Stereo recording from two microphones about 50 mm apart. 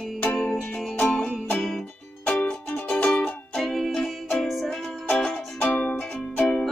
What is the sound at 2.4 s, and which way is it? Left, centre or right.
Music, left.